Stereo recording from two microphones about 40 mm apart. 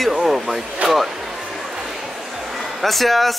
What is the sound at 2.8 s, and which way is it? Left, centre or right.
Speech, centre.